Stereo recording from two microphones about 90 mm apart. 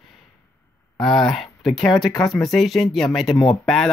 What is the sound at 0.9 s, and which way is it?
Speech, 5° left (ahead or behind).